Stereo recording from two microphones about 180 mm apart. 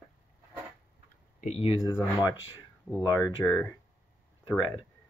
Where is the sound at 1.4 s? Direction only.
35° left (ahead or behind).